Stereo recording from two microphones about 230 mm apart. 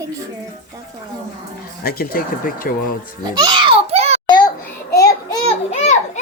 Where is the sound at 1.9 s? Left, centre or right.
Left.